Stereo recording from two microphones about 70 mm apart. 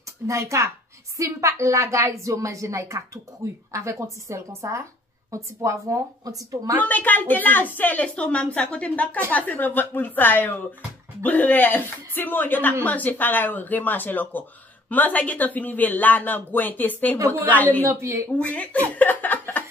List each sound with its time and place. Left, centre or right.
0.3 s a woman's voice: right
6.8 s speech: left
17.8 s a woman's voice: right
18.4 s speech: left